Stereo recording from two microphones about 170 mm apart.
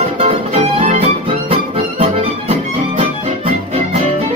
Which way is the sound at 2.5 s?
35° right (ahead or behind).